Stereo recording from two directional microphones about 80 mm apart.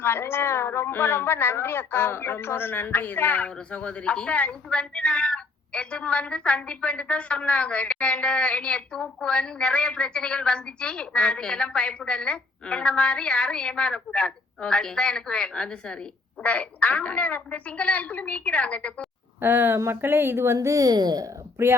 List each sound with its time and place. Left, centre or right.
0.0 s a woman's voice: left
19.4 s a woman's voice: right